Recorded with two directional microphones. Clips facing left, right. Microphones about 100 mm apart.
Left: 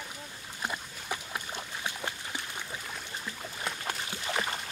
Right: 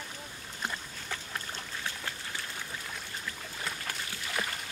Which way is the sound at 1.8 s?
15° left (ahead or behind).